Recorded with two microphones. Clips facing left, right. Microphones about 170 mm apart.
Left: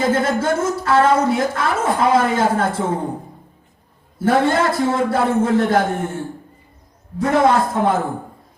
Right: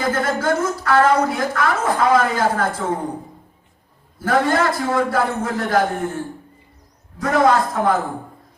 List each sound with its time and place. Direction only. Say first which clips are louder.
0.0 s a woman's voice: left 3 dB; 25° left (ahead or behind)
4.2 s a woman's voice: left 2 dB; 25° left (ahead or behind)
7.2 s a woman's voice: left 1 dB; 25° left (ahead or behind)